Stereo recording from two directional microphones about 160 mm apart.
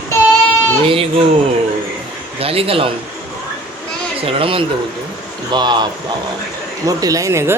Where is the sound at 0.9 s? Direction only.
35° right (ahead or behind).